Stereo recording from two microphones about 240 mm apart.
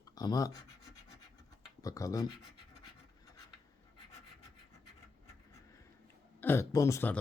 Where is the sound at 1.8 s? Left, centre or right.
Centre.